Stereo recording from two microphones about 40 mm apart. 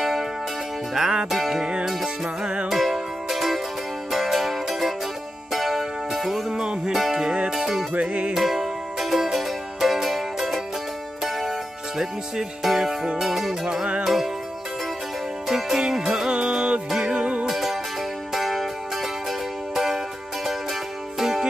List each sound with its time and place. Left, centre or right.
0.0 s music: centre
2.2 s music: right
2.7 s music: centre
6.5 s music: centre
7.9 s music: right
8.4 s music: centre
15.4 s music: centre; by 17.5 s right
17.5 s music: centre
21.2 s music: centre